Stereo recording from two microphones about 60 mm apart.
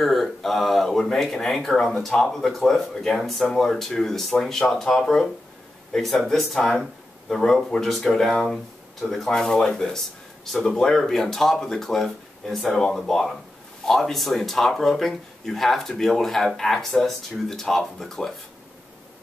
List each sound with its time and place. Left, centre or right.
0.0 s speech: centre